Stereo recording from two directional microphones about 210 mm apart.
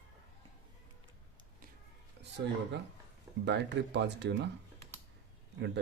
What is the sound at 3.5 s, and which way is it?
Speech, 55° right (ahead or behind).